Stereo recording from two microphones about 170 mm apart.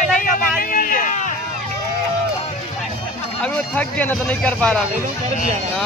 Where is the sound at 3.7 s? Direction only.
10° left (ahead or behind).